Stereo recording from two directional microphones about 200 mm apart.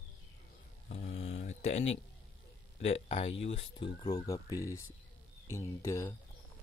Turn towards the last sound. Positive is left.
turn(degrees=15)  # may be behind; listen again after turning